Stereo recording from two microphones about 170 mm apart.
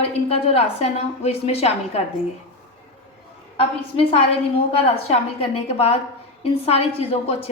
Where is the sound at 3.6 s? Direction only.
35° left (ahead or behind).